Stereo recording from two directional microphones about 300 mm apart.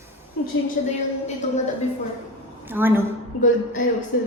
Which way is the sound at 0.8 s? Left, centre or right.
Left.